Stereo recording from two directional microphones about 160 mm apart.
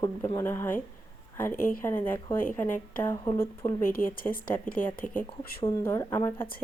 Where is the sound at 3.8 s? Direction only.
60° left (ahead or behind).